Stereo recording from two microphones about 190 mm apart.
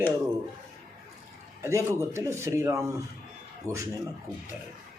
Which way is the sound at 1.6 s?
15° right (ahead or behind).